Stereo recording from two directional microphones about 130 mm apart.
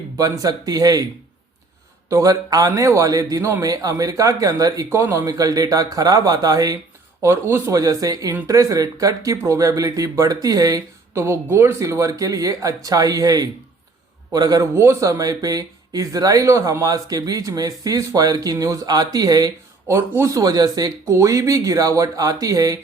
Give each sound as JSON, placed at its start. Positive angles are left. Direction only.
{"t": 0.2, "sound": "speech", "side_deg": -25}
{"t": 2.0, "sound": "speech", "side_deg": -25}